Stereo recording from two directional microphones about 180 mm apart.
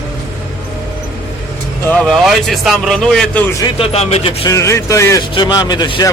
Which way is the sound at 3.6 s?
35° left (ahead or behind).